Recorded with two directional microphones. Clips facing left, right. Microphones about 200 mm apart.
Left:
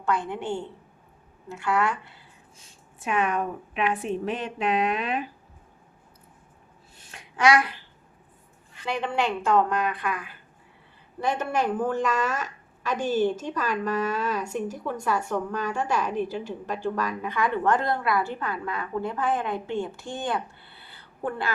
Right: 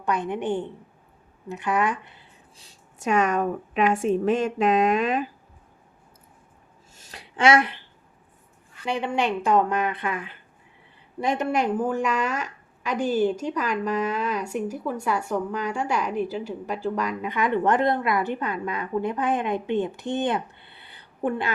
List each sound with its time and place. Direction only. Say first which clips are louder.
0.0 s a woman's voice: right 2 dB; 20° right (ahead or behind)
2.6 s a woman's voice: right 1 dB; 40° right (ahead or behind)
6.9 s a sound: right 3 dB; 40° right (ahead or behind)
8.9 s a woman's voice: right 2 dB; 15° right (ahead or behind)